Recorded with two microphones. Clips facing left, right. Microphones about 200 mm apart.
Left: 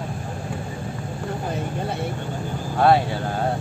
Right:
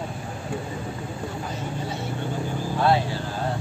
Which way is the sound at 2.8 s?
55° left (ahead or behind).